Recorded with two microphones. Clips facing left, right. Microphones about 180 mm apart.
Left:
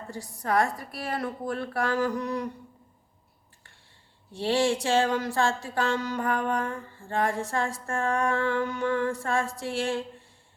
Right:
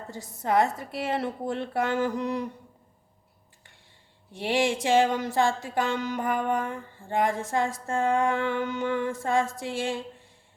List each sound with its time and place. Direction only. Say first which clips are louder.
0.1 s mantra: right 2 dB; 20° right (ahead or behind)
4.4 s speech: left 1 dB; 15° right (ahead or behind)
7.5 s mantra: right 2 dB; 20° right (ahead or behind)